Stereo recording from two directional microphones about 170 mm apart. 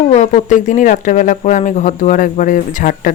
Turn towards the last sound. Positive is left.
turn(degrees=50)  # may be behind; listen again after turning